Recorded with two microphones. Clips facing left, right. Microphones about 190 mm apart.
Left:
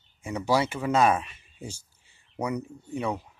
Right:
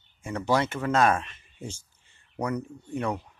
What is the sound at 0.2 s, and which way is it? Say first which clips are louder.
Speech: even; 10° left (ahead or behind).